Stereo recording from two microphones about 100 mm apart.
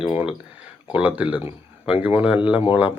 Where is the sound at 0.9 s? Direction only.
15° right (ahead or behind).